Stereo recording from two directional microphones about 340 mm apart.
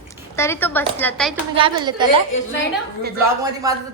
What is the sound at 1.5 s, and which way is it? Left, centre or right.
Speech, centre.